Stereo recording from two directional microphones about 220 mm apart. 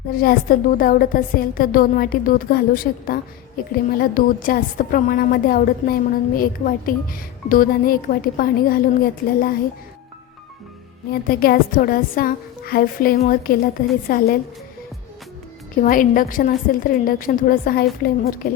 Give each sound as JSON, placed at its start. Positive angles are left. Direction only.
{"t": 0.1, "sound": "a woman's voice", "side_deg": 40}
{"t": 11.1, "sound": "a woman's voice", "side_deg": 40}
{"t": 15.7, "sound": "a woman's voice", "side_deg": 40}